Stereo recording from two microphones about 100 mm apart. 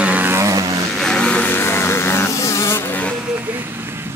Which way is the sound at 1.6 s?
25° left (ahead or behind).